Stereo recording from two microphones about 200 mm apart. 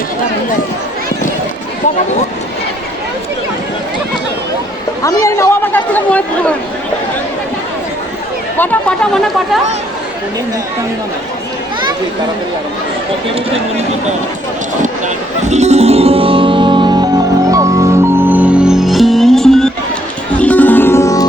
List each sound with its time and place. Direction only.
5.0 s speech: 15° left (ahead or behind)
8.5 s speech: 5° left (ahead or behind)
14.8 s music: 35° right (ahead or behind); by 21.2 s 15° left (ahead or behind)